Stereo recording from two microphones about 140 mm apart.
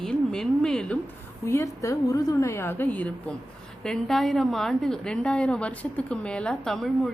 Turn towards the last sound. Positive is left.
turn(degrees=0)  # may be behind; listen again after turning